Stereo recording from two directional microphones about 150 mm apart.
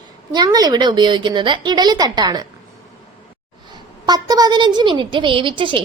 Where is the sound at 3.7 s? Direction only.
25° right (ahead or behind).